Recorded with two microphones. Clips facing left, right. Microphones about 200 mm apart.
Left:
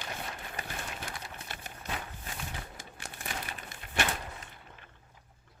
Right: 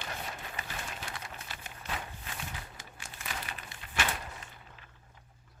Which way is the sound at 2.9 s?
60° left (ahead or behind).